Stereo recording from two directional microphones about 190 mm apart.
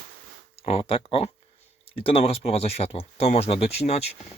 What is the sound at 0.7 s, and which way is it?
Speech, 30° left (ahead or behind).